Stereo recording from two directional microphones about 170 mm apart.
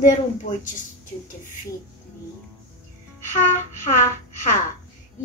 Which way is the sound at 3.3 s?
45° left (ahead or behind).